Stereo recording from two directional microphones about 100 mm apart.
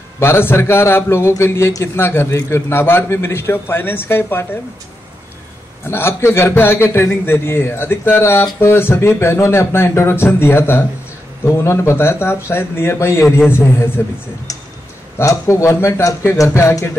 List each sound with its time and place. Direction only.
0.2 s a man's voice: 25° left (ahead or behind)
5.9 s a man's voice: 25° left (ahead or behind)
14.5 s tick: 35° left (ahead or behind)
15.1 s a man's voice: 30° left (ahead or behind)